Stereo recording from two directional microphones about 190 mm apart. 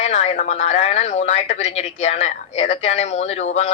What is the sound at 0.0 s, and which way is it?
Speech, 35° left (ahead or behind).